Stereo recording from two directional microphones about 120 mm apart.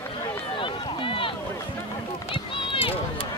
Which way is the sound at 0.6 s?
45° left (ahead or behind).